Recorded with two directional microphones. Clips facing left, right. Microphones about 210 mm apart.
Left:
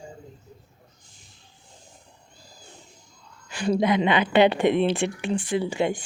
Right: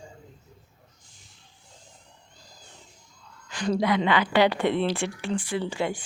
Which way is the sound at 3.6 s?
20° left (ahead or behind).